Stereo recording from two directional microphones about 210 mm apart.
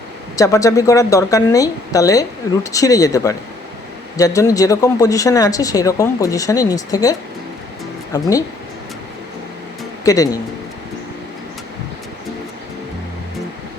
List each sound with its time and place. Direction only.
0.3 s speech: 15° left (ahead or behind)
10.0 s speech: 15° left (ahead or behind)